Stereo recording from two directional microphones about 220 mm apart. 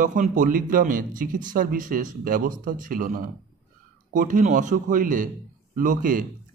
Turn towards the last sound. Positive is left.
turn(degrees=-35)  # may be behind; listen again after turning